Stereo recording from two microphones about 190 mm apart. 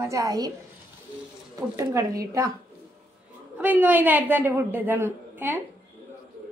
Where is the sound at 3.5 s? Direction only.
10° right (ahead or behind).